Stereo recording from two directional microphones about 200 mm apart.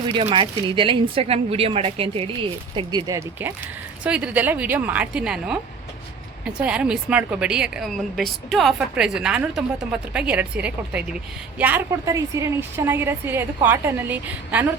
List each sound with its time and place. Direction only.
0.0 s a woman's voice: 25° right (ahead or behind); by 14.7 s 10° right (ahead or behind)